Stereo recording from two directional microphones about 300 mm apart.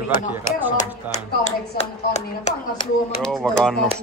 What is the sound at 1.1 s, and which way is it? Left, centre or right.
Speech, left.